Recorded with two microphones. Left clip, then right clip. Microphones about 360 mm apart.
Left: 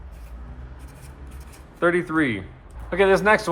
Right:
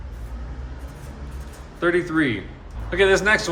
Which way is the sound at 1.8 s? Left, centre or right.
Centre.